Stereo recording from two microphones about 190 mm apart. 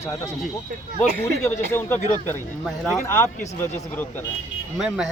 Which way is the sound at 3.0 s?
45° left (ahead or behind).